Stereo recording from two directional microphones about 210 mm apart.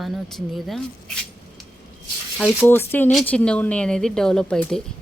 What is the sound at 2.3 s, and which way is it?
Speech, centre (ahead or behind).